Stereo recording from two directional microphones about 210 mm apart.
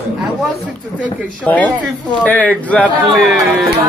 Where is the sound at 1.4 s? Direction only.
5° left (ahead or behind).